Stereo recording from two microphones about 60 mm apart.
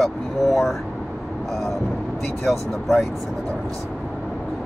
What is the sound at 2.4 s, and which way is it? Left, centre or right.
Speech, centre.